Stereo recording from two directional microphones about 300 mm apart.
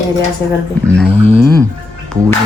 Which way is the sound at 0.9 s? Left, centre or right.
Centre.